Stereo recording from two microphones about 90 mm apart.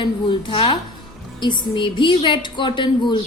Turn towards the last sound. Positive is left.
turn(degrees=65)  # may be behind; listen again after turning